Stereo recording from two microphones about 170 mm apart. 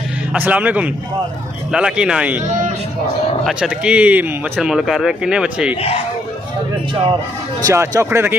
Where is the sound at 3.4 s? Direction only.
5° right (ahead or behind).